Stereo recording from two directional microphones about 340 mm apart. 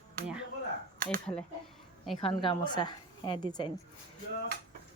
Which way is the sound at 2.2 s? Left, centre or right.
Centre.